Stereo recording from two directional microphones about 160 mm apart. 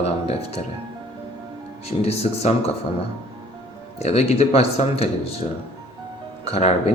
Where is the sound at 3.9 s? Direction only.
40° left (ahead or behind).